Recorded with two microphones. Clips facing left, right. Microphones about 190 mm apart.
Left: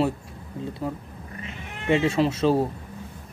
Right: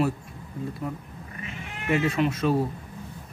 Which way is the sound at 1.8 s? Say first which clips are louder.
Left 3 dB; 25° left (ahead or behind).